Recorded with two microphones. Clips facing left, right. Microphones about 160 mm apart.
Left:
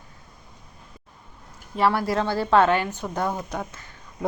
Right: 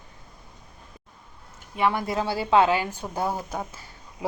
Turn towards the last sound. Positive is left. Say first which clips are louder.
# left 1 dB
turn(degrees=-10)  # may be behind; listen again after turning